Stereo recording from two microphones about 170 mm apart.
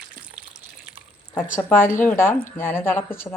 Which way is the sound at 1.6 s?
10° left (ahead or behind).